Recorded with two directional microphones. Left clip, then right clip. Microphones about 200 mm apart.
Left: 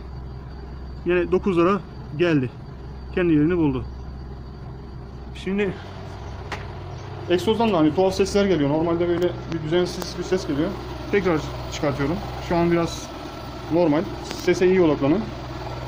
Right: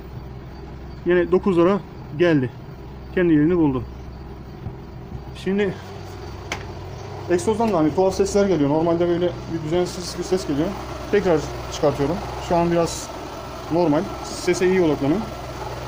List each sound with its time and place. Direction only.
1.0 s speech: 20° right (ahead or behind)
5.5 s speech: 20° right (ahead or behind)
7.4 s speech: 10° left (ahead or behind)
7.8 s speech: 10° right (ahead or behind)
14.4 s speech: 10° right (ahead or behind)